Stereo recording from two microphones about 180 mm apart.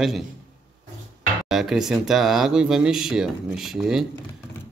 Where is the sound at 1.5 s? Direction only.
Centre (ahead or behind).